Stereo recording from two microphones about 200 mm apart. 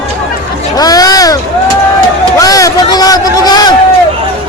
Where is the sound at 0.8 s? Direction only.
20° left (ahead or behind).